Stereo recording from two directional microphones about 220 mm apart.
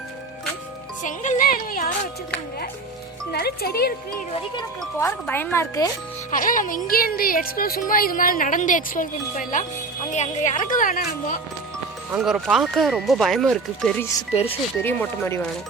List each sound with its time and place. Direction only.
1.0 s music: 35° left (ahead or behind)
3.3 s speech: 45° left (ahead or behind)
4.8 s speech: 10° left (ahead or behind)
6.3 s speech: 40° left (ahead or behind)
12.1 s speech: centre (ahead or behind)
14.3 s speech: 25° left (ahead or behind)
14.8 s speech: 10° left (ahead or behind)